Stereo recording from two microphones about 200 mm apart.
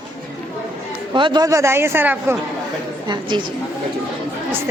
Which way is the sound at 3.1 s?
25° right (ahead or behind).